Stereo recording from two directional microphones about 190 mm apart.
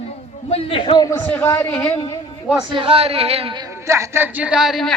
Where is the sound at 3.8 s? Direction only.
15° right (ahead or behind); by 5.0 s centre (ahead or behind).